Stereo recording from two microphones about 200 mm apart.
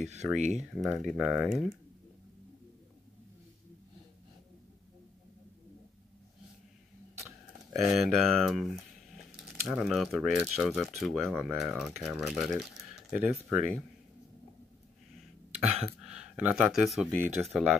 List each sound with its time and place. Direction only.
0.0 s speech: 35° right (ahead or behind)
0.6 s speech: centre (ahead or behind)
7.8 s speech: centre (ahead or behind)
16.0 s speech: 5° right (ahead or behind)